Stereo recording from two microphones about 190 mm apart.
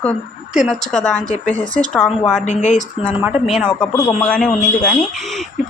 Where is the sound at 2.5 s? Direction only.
40° left (ahead or behind).